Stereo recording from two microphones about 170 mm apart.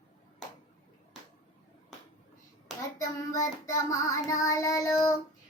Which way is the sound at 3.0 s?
20° left (ahead or behind).